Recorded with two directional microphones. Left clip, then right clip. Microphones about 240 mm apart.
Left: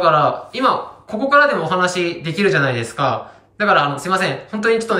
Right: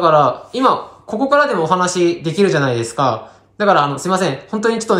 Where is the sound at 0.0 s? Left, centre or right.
Centre.